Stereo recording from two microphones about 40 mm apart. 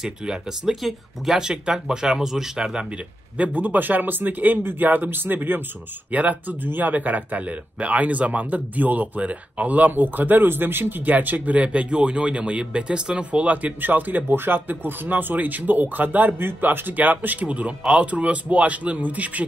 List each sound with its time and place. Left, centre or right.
0.0 s speech: centre
1.4 s speech: centre
3.5 s speech: right
6.1 s speech: right
11.5 s speech: right
13.7 s speech: right
14.3 s speech: right
16.3 s a man's voice: right